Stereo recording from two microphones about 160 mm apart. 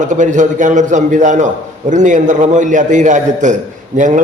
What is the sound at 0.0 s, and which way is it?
A man's voice, 50° right (ahead or behind).